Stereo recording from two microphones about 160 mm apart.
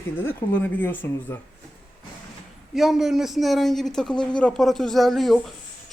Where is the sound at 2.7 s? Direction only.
Centre (ahead or behind).